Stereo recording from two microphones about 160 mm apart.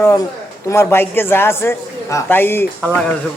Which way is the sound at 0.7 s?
15° left (ahead or behind).